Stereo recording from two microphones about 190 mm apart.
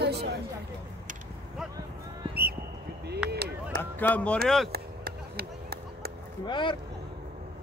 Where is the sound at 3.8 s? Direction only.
10° left (ahead or behind).